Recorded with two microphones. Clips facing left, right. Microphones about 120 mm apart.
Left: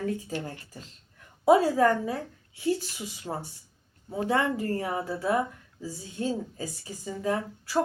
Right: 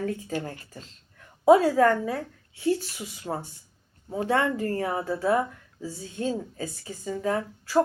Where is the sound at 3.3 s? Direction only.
15° right (ahead or behind).